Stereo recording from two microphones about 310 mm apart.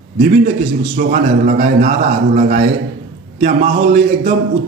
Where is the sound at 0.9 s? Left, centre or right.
Right.